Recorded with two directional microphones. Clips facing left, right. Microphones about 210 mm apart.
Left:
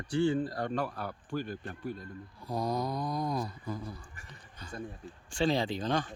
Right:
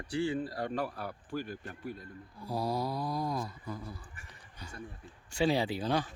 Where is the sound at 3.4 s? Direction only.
20° left (ahead or behind).